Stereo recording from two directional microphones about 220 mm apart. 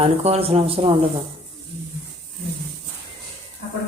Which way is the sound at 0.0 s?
25° right (ahead or behind).